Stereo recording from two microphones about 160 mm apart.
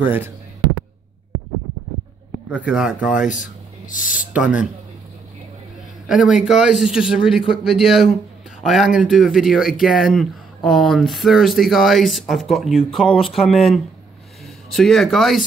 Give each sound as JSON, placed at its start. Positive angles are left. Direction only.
{"t": 0.0, "sound": "speech", "side_deg": -10}
{"t": 2.6, "sound": "speech", "side_deg": -5}
{"t": 3.3, "sound": "speech", "side_deg": 55}
{"t": 4.3, "sound": "speech", "side_deg": -5}
{"t": 6.0, "sound": "speech", "side_deg": -5}